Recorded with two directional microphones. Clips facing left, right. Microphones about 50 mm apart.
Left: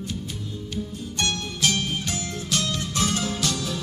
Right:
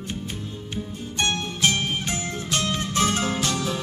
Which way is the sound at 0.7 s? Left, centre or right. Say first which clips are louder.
Right 1 dB; right.